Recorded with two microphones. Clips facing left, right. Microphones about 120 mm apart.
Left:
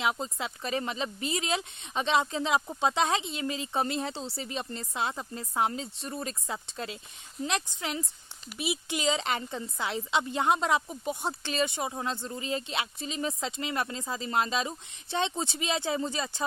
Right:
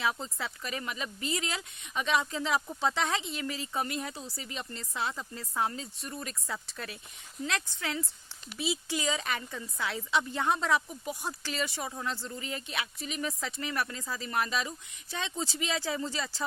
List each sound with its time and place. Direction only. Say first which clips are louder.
0.0 s speech: left 2 dB; 20° left (ahead or behind)